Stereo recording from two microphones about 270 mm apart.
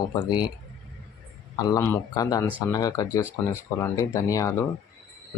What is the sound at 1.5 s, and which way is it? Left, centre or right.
Speech, centre.